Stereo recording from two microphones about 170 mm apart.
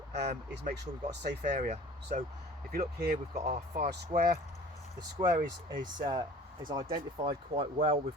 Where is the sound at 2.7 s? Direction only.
60° right (ahead or behind).